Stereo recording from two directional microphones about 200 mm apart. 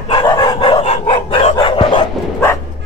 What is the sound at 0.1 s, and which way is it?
Dog, 20° left (ahead or behind).